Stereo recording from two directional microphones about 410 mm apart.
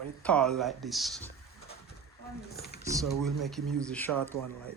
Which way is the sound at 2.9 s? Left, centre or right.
Centre.